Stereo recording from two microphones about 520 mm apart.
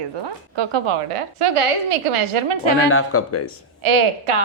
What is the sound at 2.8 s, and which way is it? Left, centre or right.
Speech, left.